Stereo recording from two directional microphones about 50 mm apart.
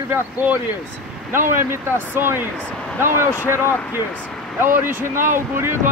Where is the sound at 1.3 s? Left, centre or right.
Right.